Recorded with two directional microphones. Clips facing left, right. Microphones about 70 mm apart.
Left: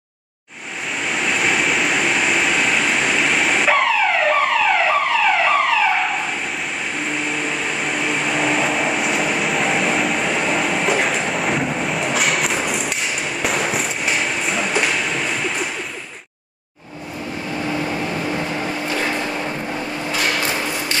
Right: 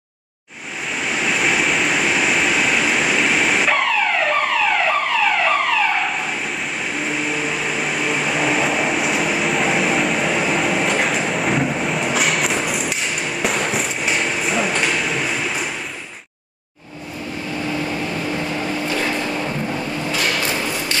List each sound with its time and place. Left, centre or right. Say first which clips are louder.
0.9 s vehicle: even; centre
18.5 s a sound: right 1 dB; left
20.1 s thump: left 1 dB; left